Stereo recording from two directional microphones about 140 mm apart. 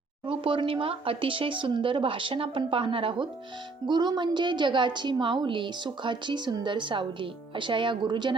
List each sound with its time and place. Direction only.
0.3 s a woman's voice: 40° right (ahead or behind)